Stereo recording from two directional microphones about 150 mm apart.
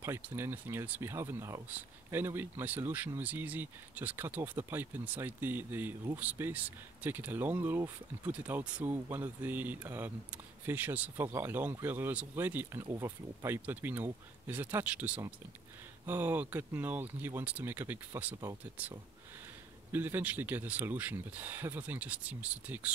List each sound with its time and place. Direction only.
0.0 s speech: 15° right (ahead or behind)